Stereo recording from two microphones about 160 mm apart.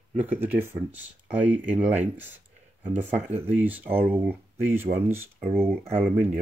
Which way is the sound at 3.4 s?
10° right (ahead or behind).